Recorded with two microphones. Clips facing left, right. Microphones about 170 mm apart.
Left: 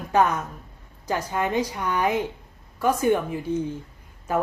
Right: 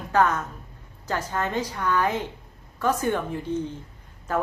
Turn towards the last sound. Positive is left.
turn(degrees=10)  # may be behind; listen again after turning